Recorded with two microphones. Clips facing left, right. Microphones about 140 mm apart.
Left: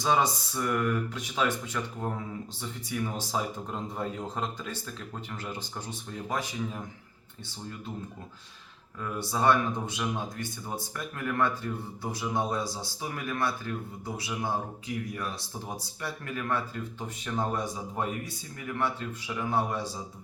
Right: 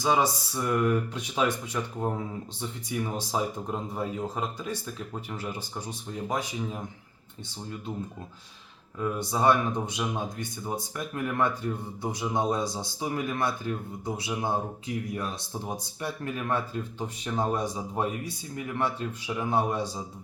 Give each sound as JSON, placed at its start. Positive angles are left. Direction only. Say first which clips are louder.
{"t": 0.0, "sound": "speech", "louder": "right 1 dB", "side_deg": -10}
{"t": 9.0, "sound": "a man's voice", "louder": "right 3 dB", "side_deg": -15}